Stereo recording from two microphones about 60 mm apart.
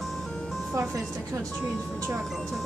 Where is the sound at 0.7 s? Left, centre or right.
Right.